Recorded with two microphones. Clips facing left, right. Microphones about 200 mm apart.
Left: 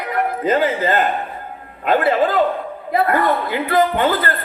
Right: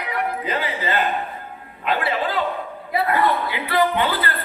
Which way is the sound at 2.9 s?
45° left (ahead or behind).